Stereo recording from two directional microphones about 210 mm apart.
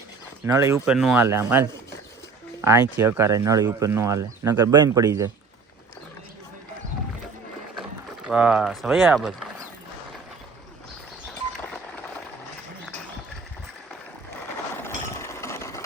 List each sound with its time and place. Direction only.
0.4 s speech: 15° right (ahead or behind)
0.9 s speech: centre (ahead or behind)
1.2 s speech: 10° right (ahead or behind)
2.6 s speech: 15° right (ahead or behind)
7.8 s speech: centre (ahead or behind)
14.8 s a sound: 10° left (ahead or behind)